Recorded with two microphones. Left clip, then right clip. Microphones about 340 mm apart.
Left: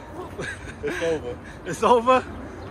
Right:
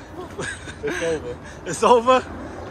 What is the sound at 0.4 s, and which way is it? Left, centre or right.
A man's voice, centre.